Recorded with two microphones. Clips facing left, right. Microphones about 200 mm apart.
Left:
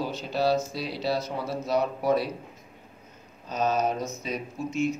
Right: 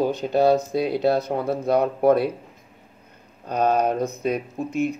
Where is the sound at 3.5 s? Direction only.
60° right (ahead or behind).